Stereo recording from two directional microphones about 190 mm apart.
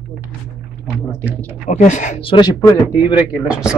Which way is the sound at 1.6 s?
40° left (ahead or behind).